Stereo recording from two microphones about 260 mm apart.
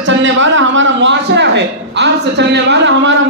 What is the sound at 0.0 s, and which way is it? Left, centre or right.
A man's voice, right.